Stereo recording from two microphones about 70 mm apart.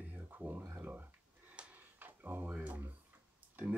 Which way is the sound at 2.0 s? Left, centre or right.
Right.